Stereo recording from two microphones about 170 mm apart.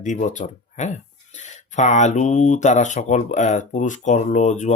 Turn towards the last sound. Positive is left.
turn(degrees=45)  # may be behind; listen again after turning